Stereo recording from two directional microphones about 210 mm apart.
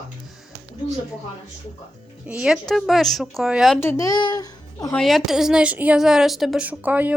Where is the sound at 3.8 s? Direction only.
15° left (ahead or behind).